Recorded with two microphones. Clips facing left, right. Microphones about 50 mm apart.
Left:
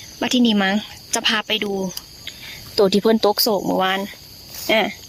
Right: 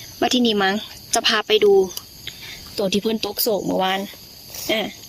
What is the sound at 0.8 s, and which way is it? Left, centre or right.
Cricket, left.